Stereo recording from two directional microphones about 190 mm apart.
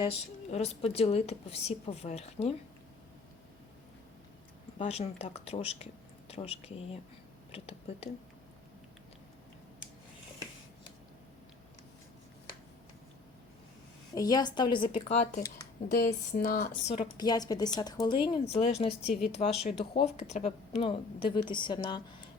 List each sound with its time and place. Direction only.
0.0 s a woman's voice: 30° left (ahead or behind)
4.8 s a woman's voice: 35° left (ahead or behind)
14.1 s speech: 20° left (ahead or behind); by 16.6 s 45° left (ahead or behind)
16.9 s speech: 25° left (ahead or behind)
19.0 s speech: centre (ahead or behind)
19.3 s a woman's voice: 30° left (ahead or behind)